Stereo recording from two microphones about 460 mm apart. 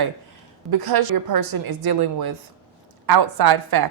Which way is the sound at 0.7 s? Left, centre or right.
Right.